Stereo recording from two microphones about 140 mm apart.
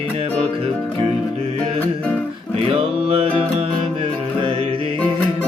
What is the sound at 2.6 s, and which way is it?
Music, 40° right (ahead or behind).